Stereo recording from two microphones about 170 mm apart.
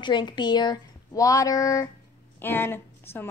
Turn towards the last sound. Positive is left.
turn(degrees=15)  # may be behind; listen again after turning